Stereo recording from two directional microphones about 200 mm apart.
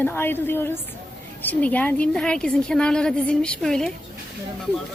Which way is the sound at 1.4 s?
10° left (ahead or behind).